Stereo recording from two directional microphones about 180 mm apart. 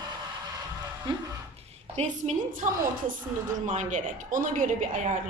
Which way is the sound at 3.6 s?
45° right (ahead or behind).